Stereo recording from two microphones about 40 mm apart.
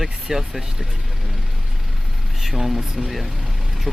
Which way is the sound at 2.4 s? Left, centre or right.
Centre.